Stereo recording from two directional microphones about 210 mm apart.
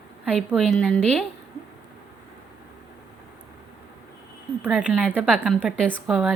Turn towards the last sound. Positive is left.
turn(degrees=0)  # may be behind; listen again after turning